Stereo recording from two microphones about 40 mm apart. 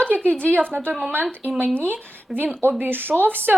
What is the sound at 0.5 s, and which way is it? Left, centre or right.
Speech, right.